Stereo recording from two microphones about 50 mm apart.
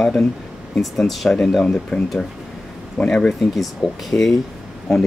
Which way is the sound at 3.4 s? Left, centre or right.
Centre.